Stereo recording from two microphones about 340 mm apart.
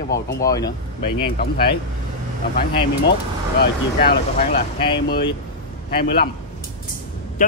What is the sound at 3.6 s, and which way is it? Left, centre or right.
Speech, left.